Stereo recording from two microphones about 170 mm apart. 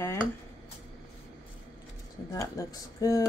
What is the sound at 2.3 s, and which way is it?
Speech, 20° left (ahead or behind).